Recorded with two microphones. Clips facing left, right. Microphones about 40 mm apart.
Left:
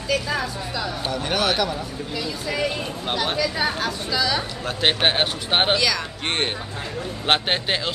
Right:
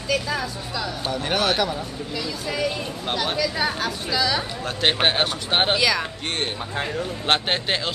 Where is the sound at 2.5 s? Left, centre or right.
Centre.